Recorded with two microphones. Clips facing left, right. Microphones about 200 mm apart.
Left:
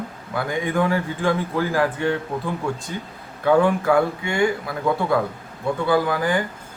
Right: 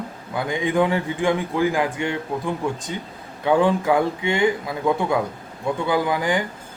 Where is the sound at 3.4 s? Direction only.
15° right (ahead or behind).